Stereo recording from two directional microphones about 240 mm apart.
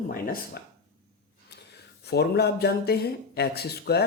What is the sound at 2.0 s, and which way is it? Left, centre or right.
Speech, left.